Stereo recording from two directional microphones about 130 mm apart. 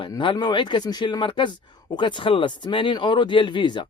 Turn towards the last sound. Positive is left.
turn(degrees=35)  # may be behind; listen again after turning